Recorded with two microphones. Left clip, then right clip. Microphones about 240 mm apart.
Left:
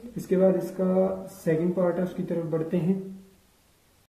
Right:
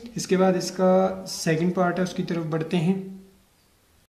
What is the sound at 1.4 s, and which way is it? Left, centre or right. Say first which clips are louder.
Speech: right 1 dB; right.